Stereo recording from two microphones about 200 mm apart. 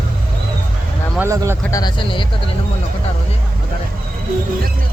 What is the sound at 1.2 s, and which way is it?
Speech, 15° right (ahead or behind).